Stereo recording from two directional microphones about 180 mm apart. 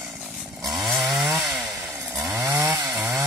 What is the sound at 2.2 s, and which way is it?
Chainsaw, 15° right (ahead or behind).